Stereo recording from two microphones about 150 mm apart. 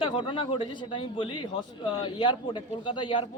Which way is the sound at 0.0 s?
35° left (ahead or behind).